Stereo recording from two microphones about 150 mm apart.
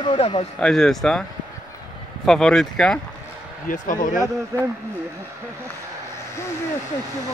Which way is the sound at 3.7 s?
60° left (ahead or behind).